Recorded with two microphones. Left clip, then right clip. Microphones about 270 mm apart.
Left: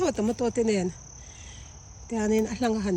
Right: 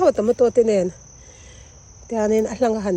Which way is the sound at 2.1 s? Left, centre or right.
Centre.